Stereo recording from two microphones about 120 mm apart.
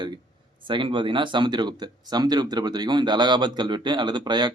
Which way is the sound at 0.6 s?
45° right (ahead or behind).